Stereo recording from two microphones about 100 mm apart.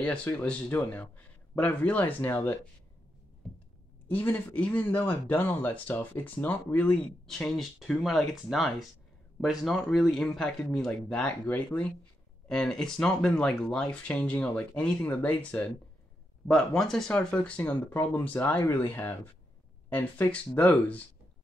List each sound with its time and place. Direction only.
0.0 s speech: 10° left (ahead or behind)
4.1 s speech: 20° left (ahead or behind)